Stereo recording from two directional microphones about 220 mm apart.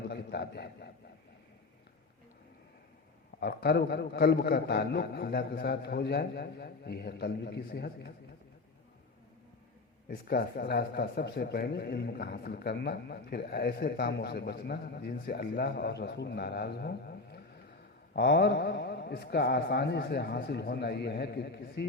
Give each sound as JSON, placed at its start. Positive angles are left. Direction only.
{"t": 0.1, "sound": "a man's voice", "side_deg": 45}
{"t": 3.4, "sound": "a man's voice", "side_deg": 45}
{"t": 10.1, "sound": "a man's voice", "side_deg": 45}